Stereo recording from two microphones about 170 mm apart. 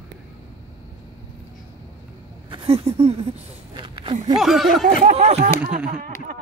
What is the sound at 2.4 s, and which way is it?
Speech, 35° right (ahead or behind).